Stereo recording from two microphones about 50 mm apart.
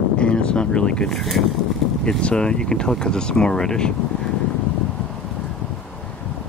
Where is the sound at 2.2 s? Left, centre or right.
Centre.